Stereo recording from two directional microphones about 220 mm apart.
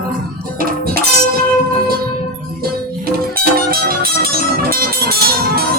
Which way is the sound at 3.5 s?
40° right (ahead or behind).